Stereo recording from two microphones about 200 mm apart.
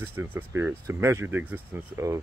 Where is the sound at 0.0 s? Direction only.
10° right (ahead or behind).